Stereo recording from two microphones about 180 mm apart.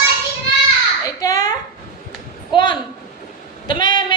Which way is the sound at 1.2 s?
20° left (ahead or behind).